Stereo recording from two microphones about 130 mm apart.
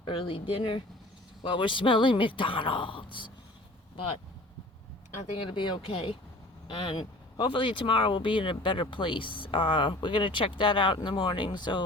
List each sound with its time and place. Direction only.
0.0 s speech: 40° left (ahead or behind)
5.4 s speech: 40° left (ahead or behind)